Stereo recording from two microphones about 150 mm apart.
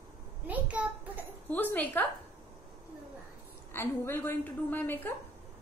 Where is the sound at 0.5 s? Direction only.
10° right (ahead or behind).